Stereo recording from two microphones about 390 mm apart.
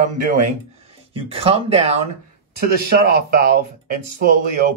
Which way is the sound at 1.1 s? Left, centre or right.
Centre.